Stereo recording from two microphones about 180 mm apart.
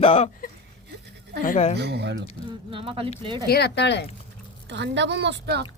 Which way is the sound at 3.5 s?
65° left (ahead or behind).